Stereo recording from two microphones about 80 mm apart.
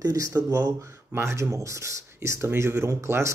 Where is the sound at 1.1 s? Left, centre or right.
Right.